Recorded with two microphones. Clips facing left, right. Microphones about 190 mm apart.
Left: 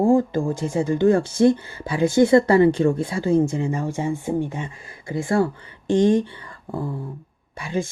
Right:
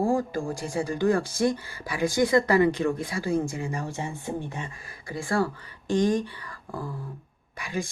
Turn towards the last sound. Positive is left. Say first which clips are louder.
# left 6 dB
turn(degrees=25)  # may be behind; listen again after turning